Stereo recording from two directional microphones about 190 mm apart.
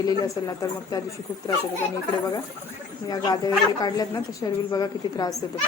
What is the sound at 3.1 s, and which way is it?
A woman's voice, 20° left (ahead or behind).